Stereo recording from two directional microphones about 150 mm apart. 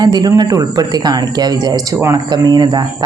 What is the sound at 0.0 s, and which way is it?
Speech, 25° right (ahead or behind).